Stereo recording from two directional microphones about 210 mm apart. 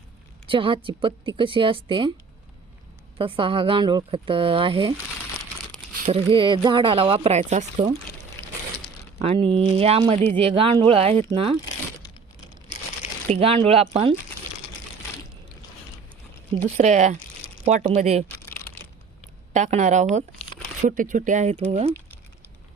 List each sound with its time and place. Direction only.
0.4 s speech: 25° right (ahead or behind)
3.2 s speech: 25° right (ahead or behind)
6.1 s speech: 25° right (ahead or behind)
9.2 s speech: 25° right (ahead or behind)
13.2 s speech: 30° right (ahead or behind)
16.6 s speech: 35° right (ahead or behind)
19.5 s speech: 35° right (ahead or behind)